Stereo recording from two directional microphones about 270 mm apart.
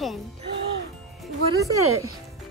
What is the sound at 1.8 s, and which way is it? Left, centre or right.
Speech, right.